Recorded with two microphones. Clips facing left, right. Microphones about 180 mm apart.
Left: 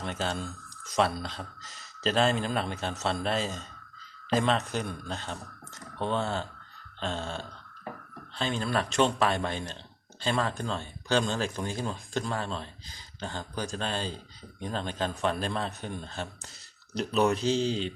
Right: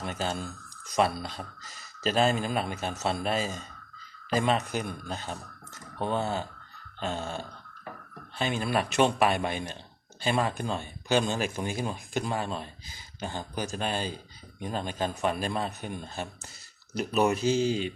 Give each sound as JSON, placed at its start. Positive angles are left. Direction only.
{"t": 0.0, "sound": "speech", "side_deg": -5}